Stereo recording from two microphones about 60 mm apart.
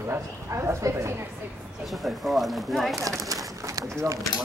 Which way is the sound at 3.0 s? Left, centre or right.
Right.